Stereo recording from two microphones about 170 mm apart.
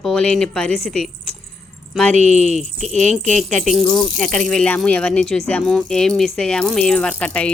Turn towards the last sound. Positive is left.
turn(degrees=5)  # may be behind; listen again after turning